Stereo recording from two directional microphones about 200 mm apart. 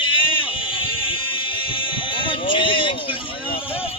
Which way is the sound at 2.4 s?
25° left (ahead or behind).